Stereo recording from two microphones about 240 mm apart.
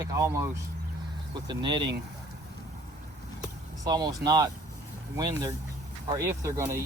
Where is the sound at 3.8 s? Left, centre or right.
Centre.